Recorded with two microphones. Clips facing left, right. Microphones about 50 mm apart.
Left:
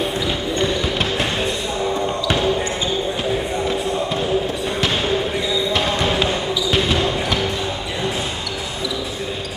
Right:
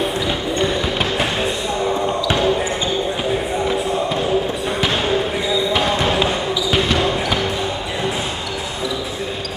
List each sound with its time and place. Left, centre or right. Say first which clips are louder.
0.6 s basketball bounce: right 1 dB; centre
4.8 s basketball bounce: right 1 dB; centre